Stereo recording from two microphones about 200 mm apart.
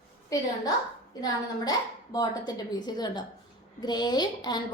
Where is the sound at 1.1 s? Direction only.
20° left (ahead or behind).